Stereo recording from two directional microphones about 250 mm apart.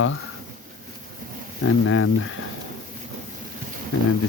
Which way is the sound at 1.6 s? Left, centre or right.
Left.